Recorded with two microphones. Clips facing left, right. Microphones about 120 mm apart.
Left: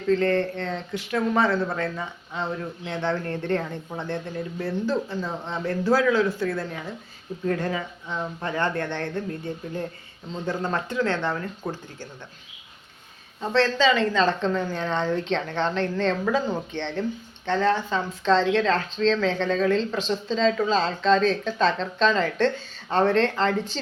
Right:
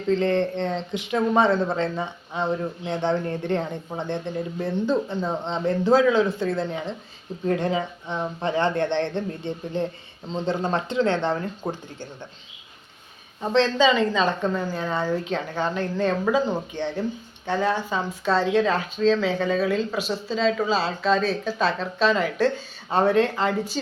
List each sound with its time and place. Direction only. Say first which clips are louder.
0.1 s speech: even; 20° right (ahead or behind)
13.4 s a woman's voice: right 2 dB; 15° right (ahead or behind)